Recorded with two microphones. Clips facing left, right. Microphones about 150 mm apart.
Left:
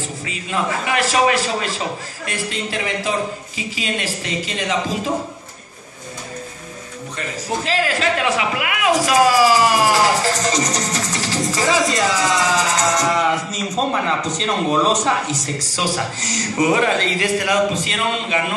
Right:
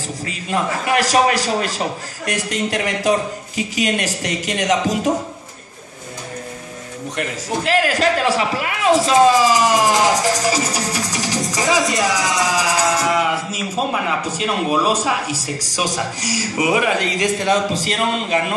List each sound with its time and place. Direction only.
0.2 s a man's voice: 45° right (ahead or behind)
2.2 s speech: 75° right (ahead or behind)
4.2 s speech: 75° right (ahead or behind)
7.2 s speech: 60° right (ahead or behind)
8.0 s speech: 35° right (ahead or behind); by 17.6 s 20° right (ahead or behind)
17.7 s a man's voice: 40° right (ahead or behind)